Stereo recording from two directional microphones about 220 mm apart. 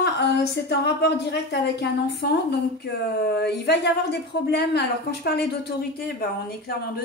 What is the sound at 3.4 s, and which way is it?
A woman's voice, 50° left (ahead or behind).